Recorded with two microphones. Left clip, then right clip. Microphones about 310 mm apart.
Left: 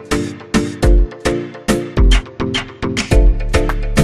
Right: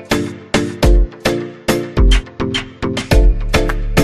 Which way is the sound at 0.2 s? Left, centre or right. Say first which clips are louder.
Right 1 dB; centre.